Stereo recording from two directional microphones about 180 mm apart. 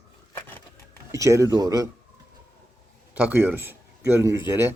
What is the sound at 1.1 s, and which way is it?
Speech, 15° right (ahead or behind).